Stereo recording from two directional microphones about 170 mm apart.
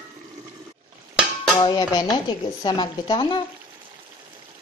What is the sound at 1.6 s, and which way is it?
Speech, 25° left (ahead or behind).